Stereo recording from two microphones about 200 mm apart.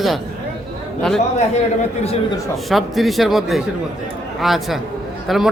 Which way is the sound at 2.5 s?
Centre (ahead or behind).